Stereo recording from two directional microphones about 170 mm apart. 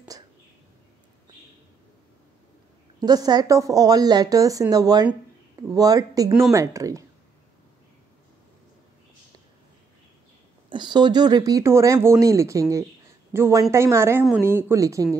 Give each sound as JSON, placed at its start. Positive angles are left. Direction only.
{"t": 3.0, "sound": "a woman's voice", "side_deg": -25}
{"t": 10.7, "sound": "a woman's voice", "side_deg": -25}